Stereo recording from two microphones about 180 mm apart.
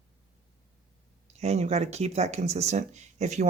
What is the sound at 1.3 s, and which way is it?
Speech, 35° right (ahead or behind).